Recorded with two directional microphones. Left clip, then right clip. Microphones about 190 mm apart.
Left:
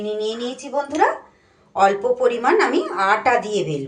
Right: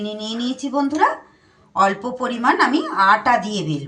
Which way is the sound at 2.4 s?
25° left (ahead or behind).